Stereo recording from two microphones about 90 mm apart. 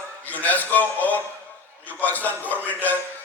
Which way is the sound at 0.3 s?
20° left (ahead or behind).